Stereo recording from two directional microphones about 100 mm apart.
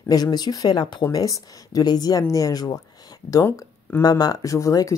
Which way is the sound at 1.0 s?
35° left (ahead or behind).